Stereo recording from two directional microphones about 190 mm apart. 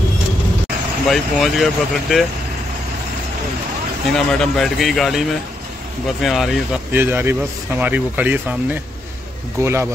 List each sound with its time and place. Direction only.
1.0 s speech: centre (ahead or behind)
4.1 s speech: centre (ahead or behind)
6.9 s speech: 10° right (ahead or behind)